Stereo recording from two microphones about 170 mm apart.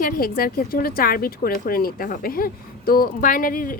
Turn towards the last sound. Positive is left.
turn(degrees=55)  # may be behind; listen again after turning